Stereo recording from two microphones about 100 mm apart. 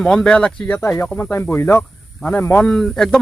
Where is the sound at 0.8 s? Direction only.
25° left (ahead or behind).